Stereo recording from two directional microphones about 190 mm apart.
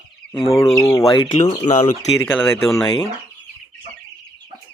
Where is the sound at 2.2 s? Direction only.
10° left (ahead or behind).